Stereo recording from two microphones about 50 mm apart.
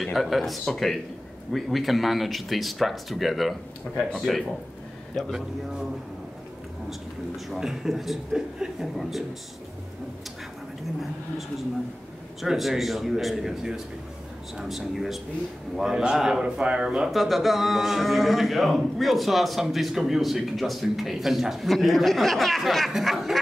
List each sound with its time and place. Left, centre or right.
0.0 s speech: centre
3.9 s speech: left
4.2 s speech: centre
6.9 s speech: centre
12.4 s speech: centre
15.9 s a man's voice: centre
17.1 s speech: centre